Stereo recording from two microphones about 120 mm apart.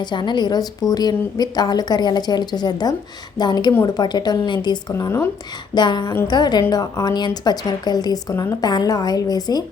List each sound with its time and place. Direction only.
0.0 s a woman's voice: 40° left (ahead or behind); by 5.3 s 25° left (ahead or behind)
5.7 s a woman's voice: 35° left (ahead or behind)